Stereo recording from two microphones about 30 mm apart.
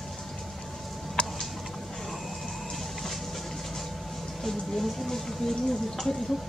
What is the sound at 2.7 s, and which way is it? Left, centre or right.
Music, centre.